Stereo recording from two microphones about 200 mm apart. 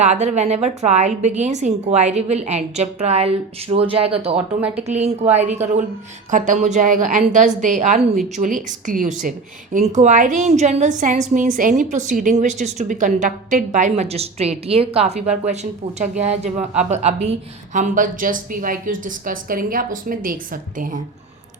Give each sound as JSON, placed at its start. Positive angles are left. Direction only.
{"t": 0.0, "sound": "a woman's voice", "side_deg": -35}
{"t": 4.4, "sound": "speech", "side_deg": -5}
{"t": 4.8, "sound": "a woman's voice", "side_deg": -35}